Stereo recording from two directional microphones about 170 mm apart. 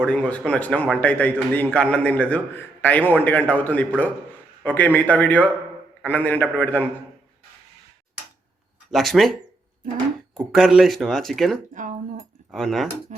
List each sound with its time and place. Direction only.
0.0 s a man's voice: 5° left (ahead or behind)
8.9 s speech: centre (ahead or behind)
10.3 s speech: centre (ahead or behind)
11.7 s a sound: 50° right (ahead or behind)
12.5 s speech: centre (ahead or behind)
13.1 s music: 45° right (ahead or behind)